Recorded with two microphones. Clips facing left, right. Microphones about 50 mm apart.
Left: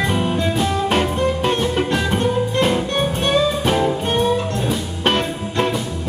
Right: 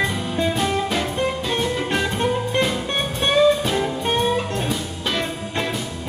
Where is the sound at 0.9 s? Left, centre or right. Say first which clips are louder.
Left 4 dB; left.